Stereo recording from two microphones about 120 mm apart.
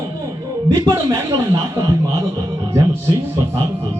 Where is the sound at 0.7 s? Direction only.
25° right (ahead or behind).